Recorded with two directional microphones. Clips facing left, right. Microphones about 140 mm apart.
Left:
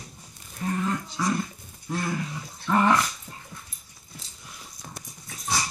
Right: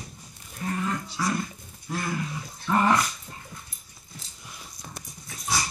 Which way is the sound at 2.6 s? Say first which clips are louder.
Left 1 dB; 5° right (ahead or behind).